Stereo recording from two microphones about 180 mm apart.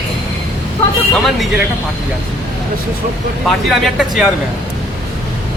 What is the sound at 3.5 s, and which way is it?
Speech, centre (ahead or behind).